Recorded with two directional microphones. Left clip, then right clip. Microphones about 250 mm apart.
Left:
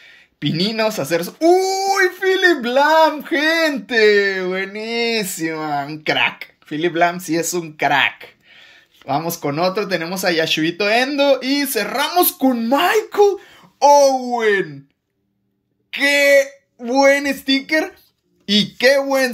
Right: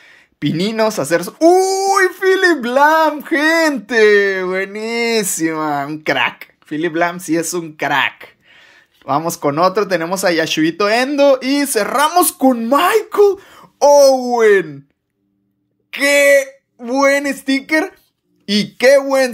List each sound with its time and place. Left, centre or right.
0.0 s speech: centre
15.9 s speech: centre